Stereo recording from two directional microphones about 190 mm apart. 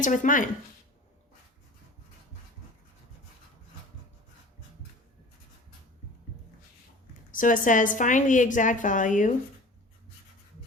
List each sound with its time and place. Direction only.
0.0 s a woman's voice: 40° left (ahead or behind)
7.3 s a woman's voice: 45° left (ahead or behind)